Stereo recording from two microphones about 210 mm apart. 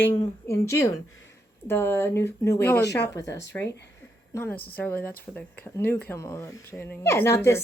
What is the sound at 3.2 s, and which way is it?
Speech, 55° left (ahead or behind).